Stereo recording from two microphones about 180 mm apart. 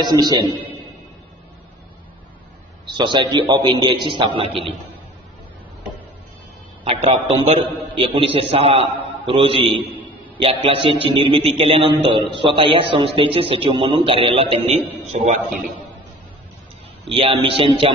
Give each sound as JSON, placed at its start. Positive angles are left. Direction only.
{"t": 0.0, "sound": "a man's voice", "side_deg": -25}
{"t": 2.9, "sound": "a man's voice", "side_deg": -25}
{"t": 6.8, "sound": "a man's voice", "side_deg": -30}
{"t": 17.1, "sound": "a man's voice", "side_deg": -30}